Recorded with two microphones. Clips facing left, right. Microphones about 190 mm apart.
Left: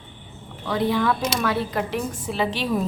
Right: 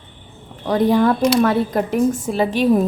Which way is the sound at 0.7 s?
45° right (ahead or behind).